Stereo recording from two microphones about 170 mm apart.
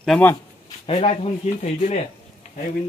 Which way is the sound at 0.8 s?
35° left (ahead or behind).